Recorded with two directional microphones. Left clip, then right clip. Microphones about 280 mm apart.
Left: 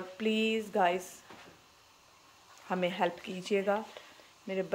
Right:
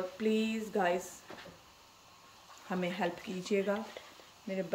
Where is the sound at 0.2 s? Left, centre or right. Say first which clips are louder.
Left 4 dB; centre.